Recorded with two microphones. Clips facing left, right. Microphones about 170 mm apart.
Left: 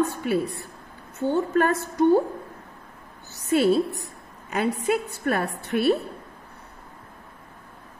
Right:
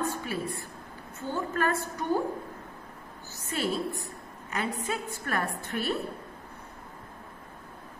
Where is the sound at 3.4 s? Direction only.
65° left (ahead or behind).